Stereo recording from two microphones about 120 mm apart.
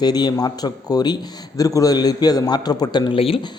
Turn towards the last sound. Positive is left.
turn(degrees=35)  # may be behind; listen again after turning